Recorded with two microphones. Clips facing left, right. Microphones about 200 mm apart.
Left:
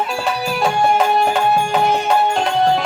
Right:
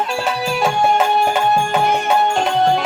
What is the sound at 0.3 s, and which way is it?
Music, centre (ahead or behind).